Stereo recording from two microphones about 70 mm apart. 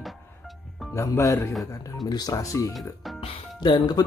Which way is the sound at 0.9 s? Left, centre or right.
Left.